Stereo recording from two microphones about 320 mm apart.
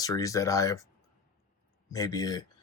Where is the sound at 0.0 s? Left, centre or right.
Centre.